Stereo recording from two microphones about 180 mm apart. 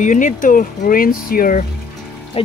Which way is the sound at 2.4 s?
30° left (ahead or behind).